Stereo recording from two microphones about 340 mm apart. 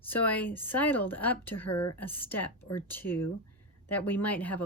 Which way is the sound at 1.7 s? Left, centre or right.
Left.